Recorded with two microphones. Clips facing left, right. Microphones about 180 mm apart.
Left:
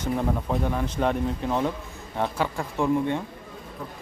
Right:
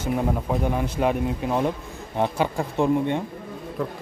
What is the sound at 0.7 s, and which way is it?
Speech, 10° right (ahead or behind).